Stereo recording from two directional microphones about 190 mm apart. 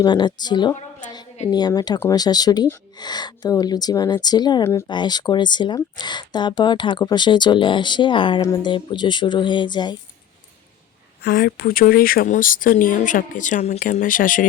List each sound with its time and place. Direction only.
0.0 s speech: 20° left (ahead or behind)
11.2 s speech: 55° left (ahead or behind)